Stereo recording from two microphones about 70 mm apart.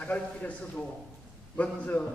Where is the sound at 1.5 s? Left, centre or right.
Left.